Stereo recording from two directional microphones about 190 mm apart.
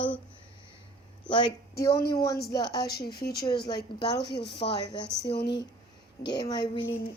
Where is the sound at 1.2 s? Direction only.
25° left (ahead or behind).